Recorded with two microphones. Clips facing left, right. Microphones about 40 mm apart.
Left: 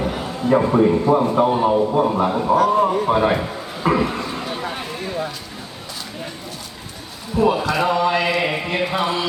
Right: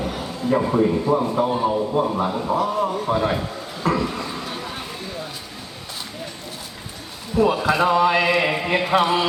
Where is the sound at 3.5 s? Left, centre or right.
Centre.